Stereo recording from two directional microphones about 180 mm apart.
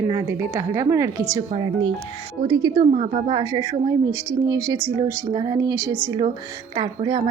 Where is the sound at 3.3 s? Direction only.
25° right (ahead or behind).